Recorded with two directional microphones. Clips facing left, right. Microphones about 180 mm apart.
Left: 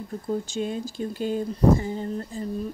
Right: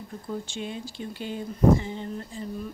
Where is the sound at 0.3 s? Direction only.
40° left (ahead or behind).